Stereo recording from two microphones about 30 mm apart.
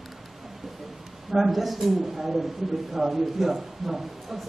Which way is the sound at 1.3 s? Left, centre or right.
Centre.